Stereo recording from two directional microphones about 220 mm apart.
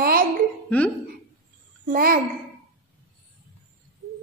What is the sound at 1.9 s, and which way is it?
Speech, 40° right (ahead or behind).